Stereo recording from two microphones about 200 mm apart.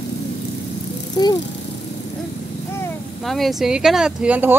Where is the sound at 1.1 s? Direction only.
20° left (ahead or behind).